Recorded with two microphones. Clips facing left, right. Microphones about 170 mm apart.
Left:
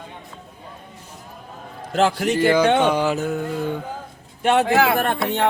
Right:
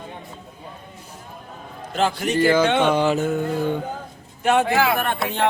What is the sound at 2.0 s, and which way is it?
Speech, 90° left.